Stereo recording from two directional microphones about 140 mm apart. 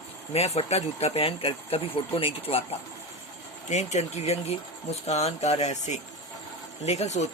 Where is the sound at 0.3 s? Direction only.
50° left (ahead or behind).